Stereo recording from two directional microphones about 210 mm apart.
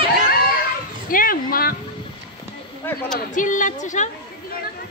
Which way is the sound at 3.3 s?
35° left (ahead or behind).